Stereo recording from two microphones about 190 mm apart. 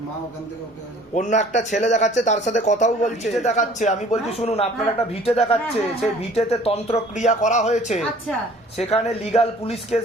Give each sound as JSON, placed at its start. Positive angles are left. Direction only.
{"t": 1.1, "sound": "speech", "side_deg": 40}